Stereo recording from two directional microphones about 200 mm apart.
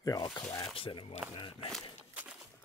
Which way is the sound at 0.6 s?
25° left (ahead or behind).